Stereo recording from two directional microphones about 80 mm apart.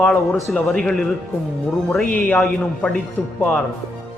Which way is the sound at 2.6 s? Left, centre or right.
Centre.